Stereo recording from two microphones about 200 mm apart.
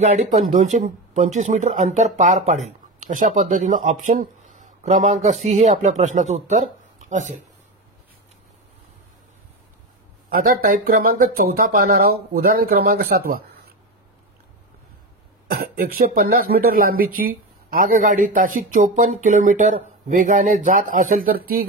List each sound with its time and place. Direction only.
0.0 s speech: 35° right (ahead or behind)
10.3 s speech: 45° right (ahead or behind)
15.5 s speech: 50° right (ahead or behind)